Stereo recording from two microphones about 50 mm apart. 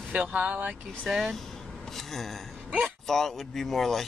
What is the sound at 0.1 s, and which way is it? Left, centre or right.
Speech, right.